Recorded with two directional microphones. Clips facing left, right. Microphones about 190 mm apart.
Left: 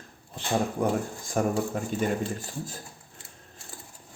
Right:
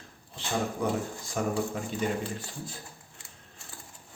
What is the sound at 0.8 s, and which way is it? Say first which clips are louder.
Speech: left 3 dB; 50° left (ahead or behind).